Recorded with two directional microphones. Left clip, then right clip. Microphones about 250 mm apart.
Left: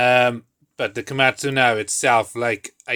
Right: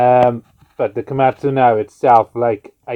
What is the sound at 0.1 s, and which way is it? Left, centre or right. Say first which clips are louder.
Speech: right 5 dB; left.